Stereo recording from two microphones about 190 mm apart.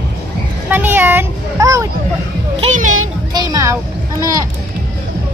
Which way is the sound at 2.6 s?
40° right (ahead or behind).